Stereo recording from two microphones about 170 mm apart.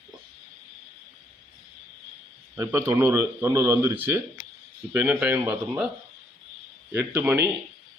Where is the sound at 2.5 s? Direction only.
15° right (ahead or behind).